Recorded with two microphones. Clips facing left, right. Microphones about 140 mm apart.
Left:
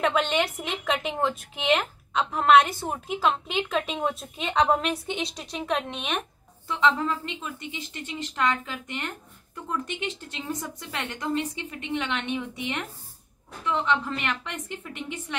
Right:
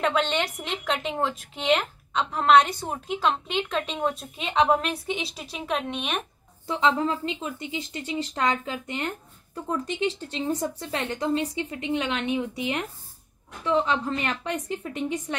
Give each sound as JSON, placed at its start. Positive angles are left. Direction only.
{"t": 0.0, "sound": "speech", "side_deg": 5}
{"t": 6.7, "sound": "speech", "side_deg": -30}
{"t": 13.7, "sound": "speech", "side_deg": -35}